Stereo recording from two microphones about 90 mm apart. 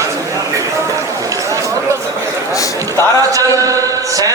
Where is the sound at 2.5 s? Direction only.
35° left (ahead or behind).